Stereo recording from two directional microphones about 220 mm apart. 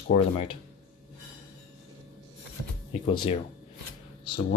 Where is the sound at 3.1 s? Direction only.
20° left (ahead or behind).